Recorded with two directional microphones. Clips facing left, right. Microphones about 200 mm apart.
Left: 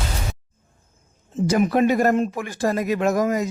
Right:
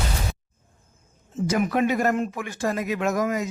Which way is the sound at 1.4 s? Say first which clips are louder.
Left 4 dB; 35° left (ahead or behind).